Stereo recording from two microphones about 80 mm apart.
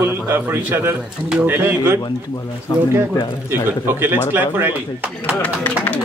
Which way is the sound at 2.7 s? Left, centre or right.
Left.